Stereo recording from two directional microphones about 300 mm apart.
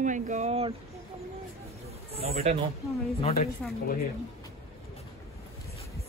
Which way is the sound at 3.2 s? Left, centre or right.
Left.